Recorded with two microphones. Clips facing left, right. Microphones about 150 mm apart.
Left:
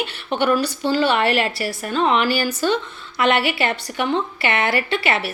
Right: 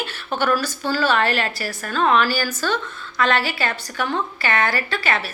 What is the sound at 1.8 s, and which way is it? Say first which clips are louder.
A woman's voice: even; 20° left (ahead or behind).